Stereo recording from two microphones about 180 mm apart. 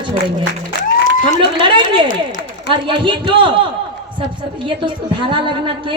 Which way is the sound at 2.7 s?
25° right (ahead or behind).